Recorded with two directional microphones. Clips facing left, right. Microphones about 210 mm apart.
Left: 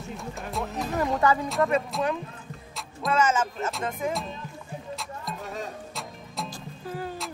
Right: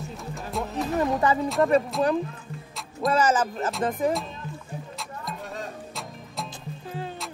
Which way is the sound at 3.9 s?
Centre (ahead or behind).